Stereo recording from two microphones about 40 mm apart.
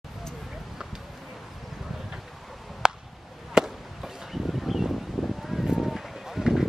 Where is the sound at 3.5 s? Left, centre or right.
Centre.